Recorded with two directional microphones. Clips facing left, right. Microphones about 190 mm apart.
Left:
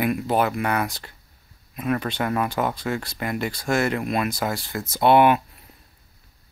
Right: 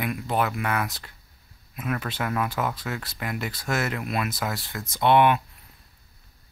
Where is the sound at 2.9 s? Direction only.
Centre (ahead or behind).